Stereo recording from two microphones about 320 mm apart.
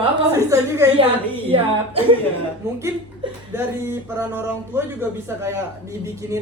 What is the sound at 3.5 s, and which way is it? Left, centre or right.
Speech, centre.